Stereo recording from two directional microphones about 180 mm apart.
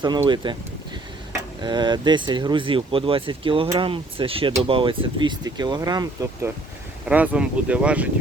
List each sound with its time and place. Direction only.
0.0 s speech: 25° right (ahead or behind)
1.6 s speech: 25° right (ahead or behind)
7.1 s speech: 5° right (ahead or behind)